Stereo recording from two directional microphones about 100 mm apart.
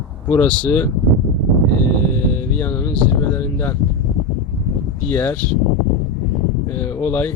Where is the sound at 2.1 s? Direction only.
20° left (ahead or behind).